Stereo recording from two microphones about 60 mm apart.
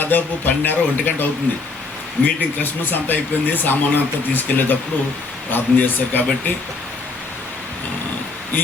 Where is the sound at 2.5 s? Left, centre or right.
Left.